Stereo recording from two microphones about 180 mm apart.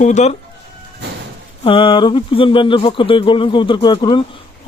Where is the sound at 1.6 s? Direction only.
30° left (ahead or behind).